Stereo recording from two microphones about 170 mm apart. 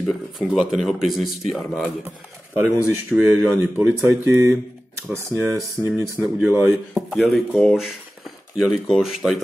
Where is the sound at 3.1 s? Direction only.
10° right (ahead or behind).